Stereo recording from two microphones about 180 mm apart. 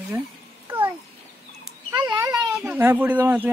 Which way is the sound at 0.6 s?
10° right (ahead or behind).